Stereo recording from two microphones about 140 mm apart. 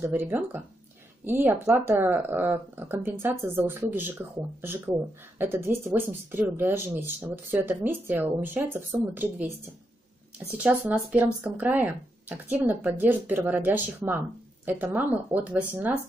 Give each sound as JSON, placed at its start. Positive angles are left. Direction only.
{"t": 0.0, "sound": "speech", "side_deg": -15}
{"t": 10.6, "sound": "speech", "side_deg": -10}